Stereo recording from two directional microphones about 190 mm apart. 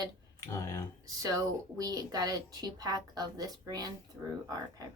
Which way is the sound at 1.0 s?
20° right (ahead or behind).